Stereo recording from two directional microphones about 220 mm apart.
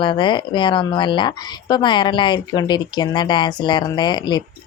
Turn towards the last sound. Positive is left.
turn(degrees=20)  # may be behind; listen again after turning